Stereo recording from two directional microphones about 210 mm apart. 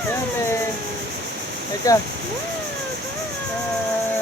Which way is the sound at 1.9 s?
15° left (ahead or behind).